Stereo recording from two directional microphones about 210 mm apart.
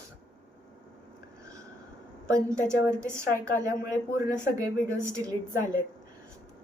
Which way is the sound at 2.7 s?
15° right (ahead or behind).